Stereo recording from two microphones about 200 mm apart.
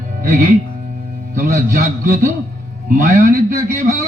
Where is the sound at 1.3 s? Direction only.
45° right (ahead or behind).